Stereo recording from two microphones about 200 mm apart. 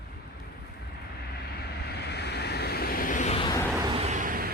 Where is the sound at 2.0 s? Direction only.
55° left (ahead or behind); by 3.5 s 30° left (ahead or behind).